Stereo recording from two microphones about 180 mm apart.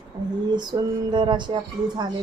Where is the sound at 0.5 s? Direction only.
25° right (ahead or behind).